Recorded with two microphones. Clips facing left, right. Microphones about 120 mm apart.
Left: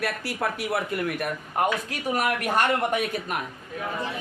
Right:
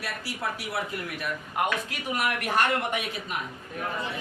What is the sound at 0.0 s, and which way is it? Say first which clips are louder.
Speech: left 5 dB; 55° left (ahead or behind).